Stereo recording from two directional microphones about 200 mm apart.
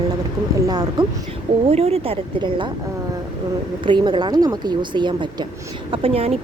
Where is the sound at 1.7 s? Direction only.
30° right (ahead or behind).